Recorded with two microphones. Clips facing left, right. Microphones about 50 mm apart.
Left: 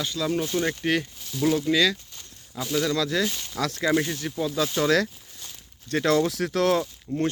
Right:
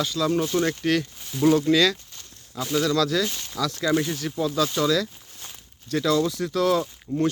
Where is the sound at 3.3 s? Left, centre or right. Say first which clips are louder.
Left 1 dB; centre.